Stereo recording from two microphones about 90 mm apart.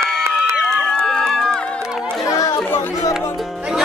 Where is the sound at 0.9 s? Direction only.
5° left (ahead or behind).